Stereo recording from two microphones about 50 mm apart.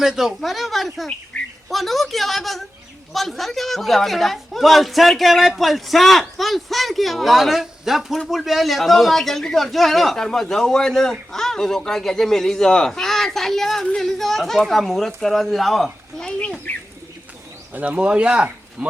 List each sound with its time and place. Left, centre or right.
0.0 s a man's voice: centre
1.3 s bird: left
1.7 s a man's voice: centre
16.7 s speech: left
17.9 s speech: right